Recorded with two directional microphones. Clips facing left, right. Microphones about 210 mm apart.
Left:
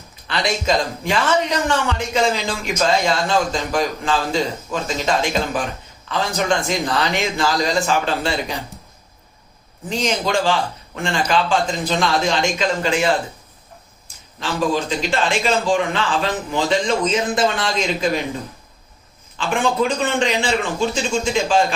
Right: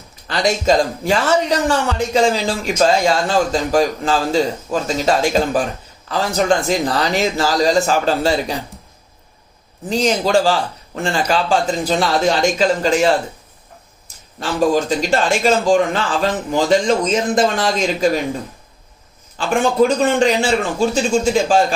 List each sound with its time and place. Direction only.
0.3 s a man's voice: 40° right (ahead or behind)
9.9 s a man's voice: 35° right (ahead or behind)
14.3 s a man's voice: 40° right (ahead or behind)
19.4 s a man's voice: 40° right (ahead or behind)